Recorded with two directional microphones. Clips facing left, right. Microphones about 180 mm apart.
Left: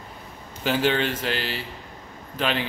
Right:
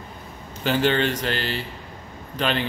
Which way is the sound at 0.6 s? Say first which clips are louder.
Right 2 dB; 5° left (ahead or behind).